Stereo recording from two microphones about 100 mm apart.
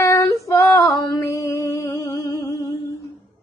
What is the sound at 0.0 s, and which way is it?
Female singing, 30° left (ahead or behind).